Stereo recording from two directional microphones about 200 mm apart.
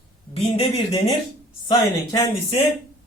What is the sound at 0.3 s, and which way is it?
Speech, 30° left (ahead or behind).